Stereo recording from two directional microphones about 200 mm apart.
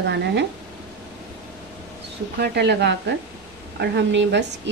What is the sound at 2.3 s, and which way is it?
A woman's voice, 55° right (ahead or behind).